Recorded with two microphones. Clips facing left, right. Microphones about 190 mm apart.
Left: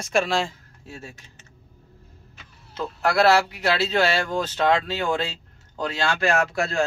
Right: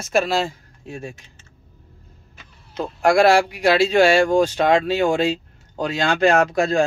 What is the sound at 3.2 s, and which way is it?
Speech, 10° right (ahead or behind).